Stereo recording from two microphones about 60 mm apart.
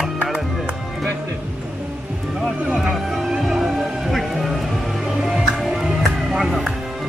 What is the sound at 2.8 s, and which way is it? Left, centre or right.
Music, centre.